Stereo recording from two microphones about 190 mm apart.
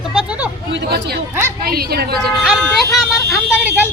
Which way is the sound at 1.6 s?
55° right (ahead or behind).